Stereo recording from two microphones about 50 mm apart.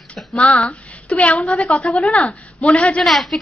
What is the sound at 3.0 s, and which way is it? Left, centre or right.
Speech, centre.